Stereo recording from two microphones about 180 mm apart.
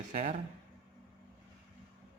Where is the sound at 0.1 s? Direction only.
45° right (ahead or behind).